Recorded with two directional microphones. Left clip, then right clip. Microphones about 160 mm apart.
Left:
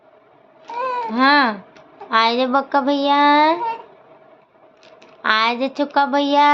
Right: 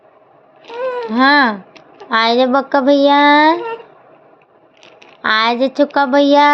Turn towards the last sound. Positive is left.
turn(degrees=-40)  # may be behind; listen again after turning